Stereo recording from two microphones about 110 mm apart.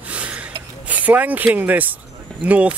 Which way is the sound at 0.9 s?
15° right (ahead or behind).